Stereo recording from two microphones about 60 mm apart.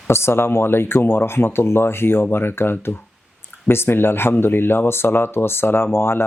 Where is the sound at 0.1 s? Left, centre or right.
Left.